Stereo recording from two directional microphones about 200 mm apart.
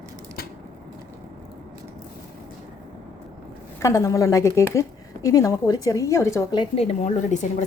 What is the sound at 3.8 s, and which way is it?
A woman's voice, 15° left (ahead or behind).